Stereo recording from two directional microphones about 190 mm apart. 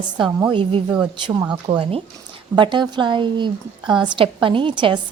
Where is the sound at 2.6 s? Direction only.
25° right (ahead or behind).